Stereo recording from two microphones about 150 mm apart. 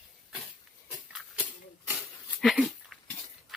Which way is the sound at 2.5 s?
Centre (ahead or behind).